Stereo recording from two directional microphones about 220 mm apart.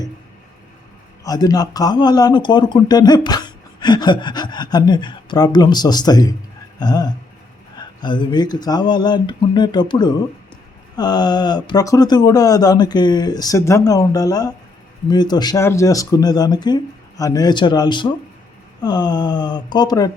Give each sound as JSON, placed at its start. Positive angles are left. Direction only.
{"t": 1.2, "sound": "a man's voice", "side_deg": 15}
{"t": 6.7, "sound": "a sound", "side_deg": 15}
{"t": 7.8, "sound": "a man's voice", "side_deg": 20}